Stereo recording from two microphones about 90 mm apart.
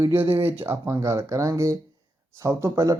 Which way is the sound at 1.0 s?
35° right (ahead or behind).